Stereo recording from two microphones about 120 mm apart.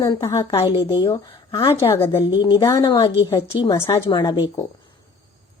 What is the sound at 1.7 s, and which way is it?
Speech, 20° left (ahead or behind).